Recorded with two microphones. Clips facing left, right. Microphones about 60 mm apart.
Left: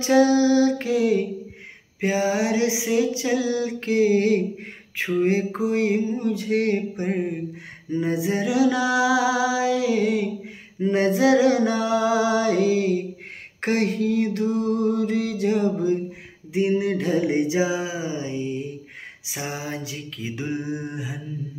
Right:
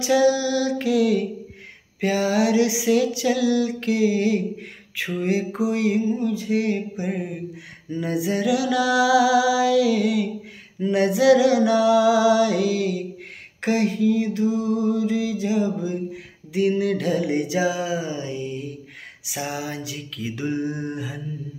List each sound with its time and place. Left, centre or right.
0.0 s music: left
2.0 s a sound: left
4.9 s music: left
6.1 s music: left
7.9 s music: left
13.6 s music: left
16.1 s a sound: left